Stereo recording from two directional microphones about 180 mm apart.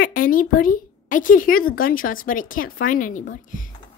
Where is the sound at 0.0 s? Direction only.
50° left (ahead or behind).